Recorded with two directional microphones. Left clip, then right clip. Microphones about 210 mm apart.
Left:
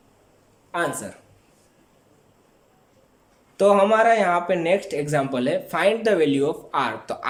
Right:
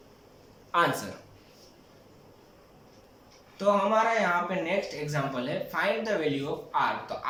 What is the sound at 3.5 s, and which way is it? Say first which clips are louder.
Speech: left 8 dB; 50° left (ahead or behind).